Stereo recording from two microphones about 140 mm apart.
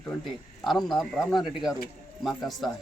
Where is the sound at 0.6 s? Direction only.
Centre (ahead or behind).